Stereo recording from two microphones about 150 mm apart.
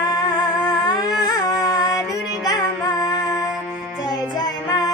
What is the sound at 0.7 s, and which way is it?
Humming, 30° left (ahead or behind).